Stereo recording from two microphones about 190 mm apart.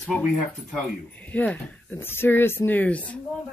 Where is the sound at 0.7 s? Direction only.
10° left (ahead or behind).